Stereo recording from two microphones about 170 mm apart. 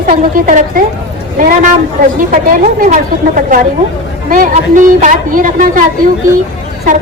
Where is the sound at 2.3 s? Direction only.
50° right (ahead or behind).